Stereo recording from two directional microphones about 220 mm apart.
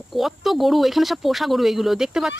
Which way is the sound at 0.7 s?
Centre (ahead or behind).